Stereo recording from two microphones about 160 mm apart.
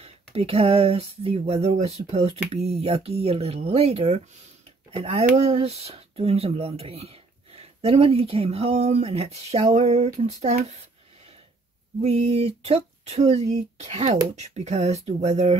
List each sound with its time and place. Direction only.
0.0 s speech: 40° right (ahead or behind)
12.0 s speech: 40° right (ahead or behind)